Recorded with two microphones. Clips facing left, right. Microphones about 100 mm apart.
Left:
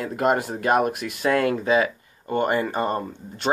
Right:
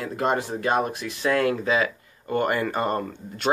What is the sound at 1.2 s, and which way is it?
Speech, 40° left (ahead or behind).